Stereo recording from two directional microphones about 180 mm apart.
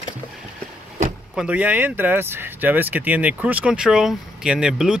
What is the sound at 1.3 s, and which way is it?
Speech, 5° right (ahead or behind).